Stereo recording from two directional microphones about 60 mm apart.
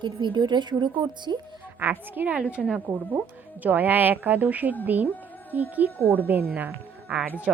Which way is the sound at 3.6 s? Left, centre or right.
Right.